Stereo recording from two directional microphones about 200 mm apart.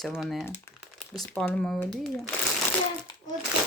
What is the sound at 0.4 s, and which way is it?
Speech, 15° left (ahead or behind).